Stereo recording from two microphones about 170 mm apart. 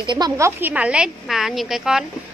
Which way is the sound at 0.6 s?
10° right (ahead or behind).